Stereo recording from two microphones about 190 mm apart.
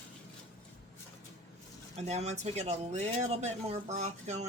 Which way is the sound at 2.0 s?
35° right (ahead or behind).